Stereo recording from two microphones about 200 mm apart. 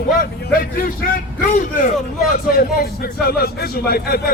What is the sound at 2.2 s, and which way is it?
A man's voice, 50° left (ahead or behind).